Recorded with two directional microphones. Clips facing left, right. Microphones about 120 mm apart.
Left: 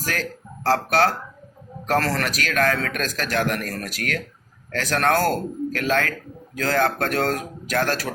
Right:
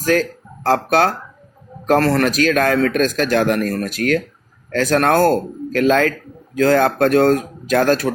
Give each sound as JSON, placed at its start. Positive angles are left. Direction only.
{"t": 0.0, "sound": "speech", "side_deg": -25}